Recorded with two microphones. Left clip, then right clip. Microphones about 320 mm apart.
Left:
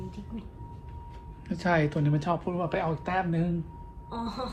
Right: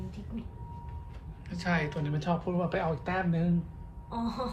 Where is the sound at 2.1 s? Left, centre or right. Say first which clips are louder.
Left 3 dB; centre.